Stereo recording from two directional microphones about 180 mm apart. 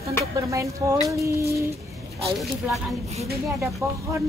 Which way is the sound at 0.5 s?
15° right (ahead or behind).